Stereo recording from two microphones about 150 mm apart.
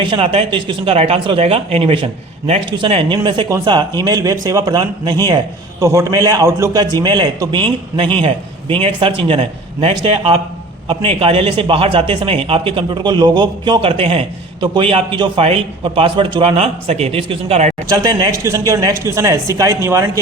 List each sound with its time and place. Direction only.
0.0 s a man's voice: 35° right (ahead or behind)
9.2 s a man's voice: 35° right (ahead or behind)
17.8 s speech: 25° right (ahead or behind)